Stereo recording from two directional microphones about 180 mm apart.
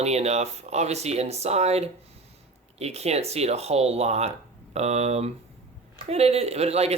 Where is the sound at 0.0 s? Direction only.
35° right (ahead or behind).